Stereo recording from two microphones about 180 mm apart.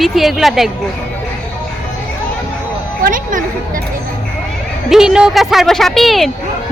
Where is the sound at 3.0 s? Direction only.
50° right (ahead or behind).